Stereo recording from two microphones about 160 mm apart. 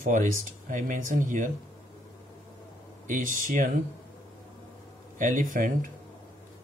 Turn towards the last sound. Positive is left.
turn(degrees=-55)  # may be behind; listen again after turning